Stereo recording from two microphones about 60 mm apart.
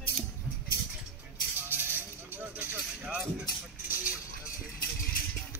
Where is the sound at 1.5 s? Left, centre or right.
Right.